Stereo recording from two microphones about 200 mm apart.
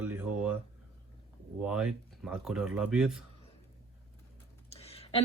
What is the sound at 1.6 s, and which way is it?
Speech, 5° right (ahead or behind).